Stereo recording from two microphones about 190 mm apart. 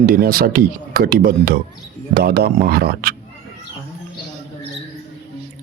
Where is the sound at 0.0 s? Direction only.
50° right (ahead or behind).